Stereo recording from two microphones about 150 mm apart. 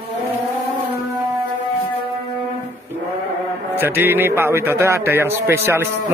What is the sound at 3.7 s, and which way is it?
A man's voice, 15° right (ahead or behind).